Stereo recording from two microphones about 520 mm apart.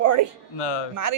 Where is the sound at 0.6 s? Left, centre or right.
Left.